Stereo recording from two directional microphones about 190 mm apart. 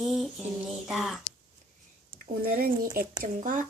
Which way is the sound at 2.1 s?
50° right (ahead or behind).